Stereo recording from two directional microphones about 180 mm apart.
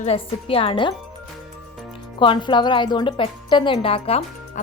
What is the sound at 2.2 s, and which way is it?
A woman's voice, 25° left (ahead or behind).